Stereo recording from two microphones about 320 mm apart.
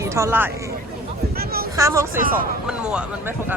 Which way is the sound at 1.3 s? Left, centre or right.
Right.